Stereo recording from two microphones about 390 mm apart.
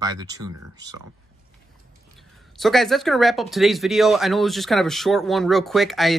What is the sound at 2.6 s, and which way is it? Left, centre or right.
Speech, centre.